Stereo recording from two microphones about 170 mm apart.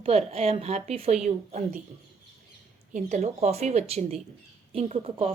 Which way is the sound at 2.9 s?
50° right (ahead or behind).